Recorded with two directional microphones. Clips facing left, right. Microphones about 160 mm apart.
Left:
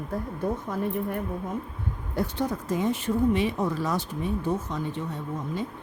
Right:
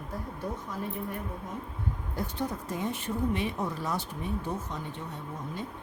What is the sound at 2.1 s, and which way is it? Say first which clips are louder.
Speech: left 7 dB; 85° left.